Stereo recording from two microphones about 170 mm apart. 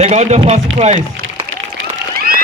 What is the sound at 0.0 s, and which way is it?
Speech, 40° right (ahead or behind).